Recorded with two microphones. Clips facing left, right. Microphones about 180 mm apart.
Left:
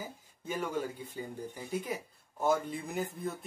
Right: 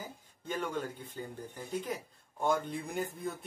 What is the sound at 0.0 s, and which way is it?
Speech, 10° left (ahead or behind).